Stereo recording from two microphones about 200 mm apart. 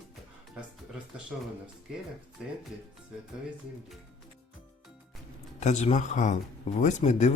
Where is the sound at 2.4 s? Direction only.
5° right (ahead or behind).